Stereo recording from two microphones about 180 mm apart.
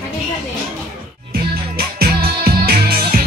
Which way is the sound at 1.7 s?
55° right (ahead or behind).